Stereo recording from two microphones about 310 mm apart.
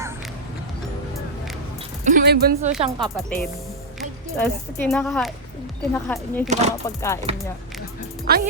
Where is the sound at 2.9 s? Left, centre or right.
Centre.